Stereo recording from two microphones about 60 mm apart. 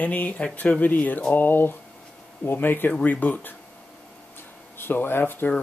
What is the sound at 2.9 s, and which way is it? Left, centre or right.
Speech, left.